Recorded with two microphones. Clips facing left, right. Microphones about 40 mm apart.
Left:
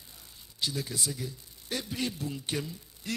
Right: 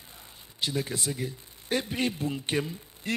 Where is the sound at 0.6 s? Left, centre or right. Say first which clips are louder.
Right 3 dB; right.